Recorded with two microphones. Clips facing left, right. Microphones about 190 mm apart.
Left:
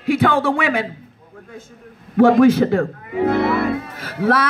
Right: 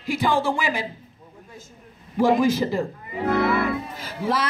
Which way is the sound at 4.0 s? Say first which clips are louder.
Left 8 dB; 60° left (ahead or behind).